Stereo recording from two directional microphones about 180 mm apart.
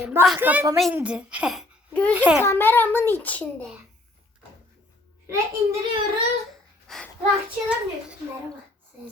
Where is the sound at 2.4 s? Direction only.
15° left (ahead or behind).